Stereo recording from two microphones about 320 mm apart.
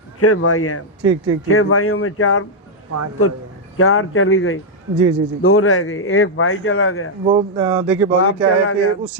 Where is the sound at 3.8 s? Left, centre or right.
Left.